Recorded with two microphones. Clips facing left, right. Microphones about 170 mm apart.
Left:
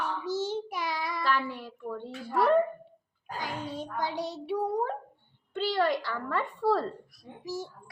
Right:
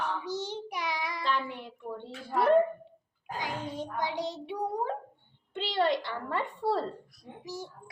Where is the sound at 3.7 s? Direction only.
20° right (ahead or behind).